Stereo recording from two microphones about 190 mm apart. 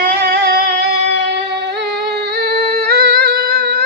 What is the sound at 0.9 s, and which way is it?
Singing, 60° right (ahead or behind).